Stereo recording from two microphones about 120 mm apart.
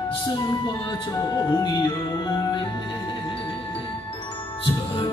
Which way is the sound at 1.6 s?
35° left (ahead or behind).